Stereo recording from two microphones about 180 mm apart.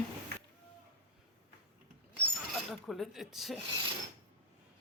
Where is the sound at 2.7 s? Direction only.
Centre (ahead or behind).